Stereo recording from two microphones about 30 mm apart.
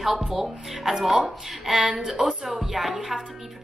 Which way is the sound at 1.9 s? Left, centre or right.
Right.